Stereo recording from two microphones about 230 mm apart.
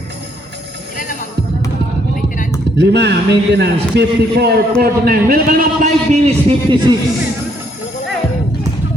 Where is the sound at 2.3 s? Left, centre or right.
Left.